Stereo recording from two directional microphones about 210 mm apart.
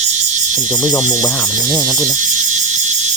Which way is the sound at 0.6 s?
15° left (ahead or behind).